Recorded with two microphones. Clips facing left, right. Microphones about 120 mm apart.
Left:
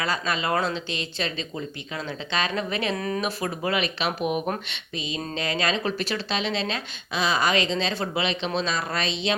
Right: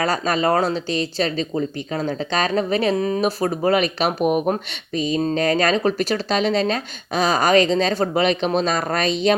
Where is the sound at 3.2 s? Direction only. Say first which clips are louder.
Right 8 dB; 40° right (ahead or behind).